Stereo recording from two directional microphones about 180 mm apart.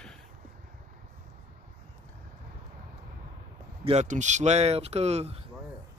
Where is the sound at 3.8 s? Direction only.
40° right (ahead or behind).